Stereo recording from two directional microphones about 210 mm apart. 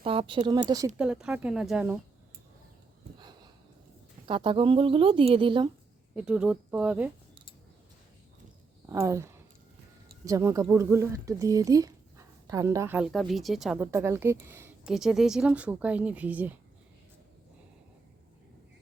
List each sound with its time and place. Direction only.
0.0 s speech: 25° right (ahead or behind)
0.9 s speech: 5° right (ahead or behind)
3.2 s a sound: 20° right (ahead or behind)
4.3 s speech: 25° right (ahead or behind)
6.1 s speech: 5° right (ahead or behind)
8.9 s speech: 15° right (ahead or behind)